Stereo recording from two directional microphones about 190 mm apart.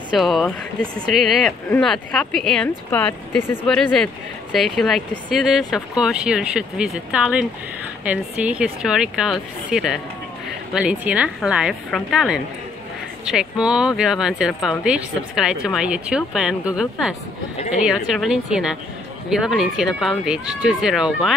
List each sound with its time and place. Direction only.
0.1 s speech: centre (ahead or behind)
17.6 s speech: 35° left (ahead or behind)
17.8 s speech: centre (ahead or behind)